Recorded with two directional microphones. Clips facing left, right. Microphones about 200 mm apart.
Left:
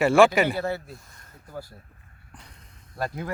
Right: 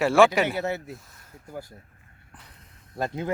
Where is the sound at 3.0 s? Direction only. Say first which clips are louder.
Right 2 dB; 20° right (ahead or behind).